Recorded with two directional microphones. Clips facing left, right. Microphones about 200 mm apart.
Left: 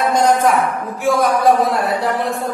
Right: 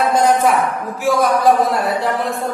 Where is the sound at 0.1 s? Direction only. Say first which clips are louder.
Left 1 dB; 5° right (ahead or behind).